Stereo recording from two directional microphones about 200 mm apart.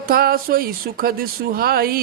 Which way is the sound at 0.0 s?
45° right (ahead or behind).